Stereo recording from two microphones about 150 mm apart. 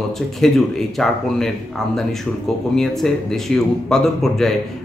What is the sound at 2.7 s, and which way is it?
Speech, centre (ahead or behind).